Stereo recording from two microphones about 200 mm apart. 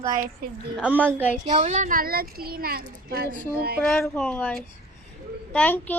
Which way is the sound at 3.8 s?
5° left (ahead or behind).